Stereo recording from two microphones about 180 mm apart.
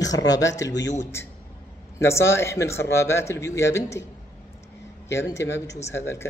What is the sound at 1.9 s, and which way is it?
A man's voice, 15° left (ahead or behind).